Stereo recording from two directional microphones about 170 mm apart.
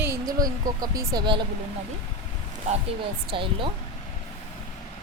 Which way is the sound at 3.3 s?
30° right (ahead or behind).